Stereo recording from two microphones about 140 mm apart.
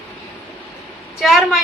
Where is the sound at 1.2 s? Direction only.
Centre (ahead or behind).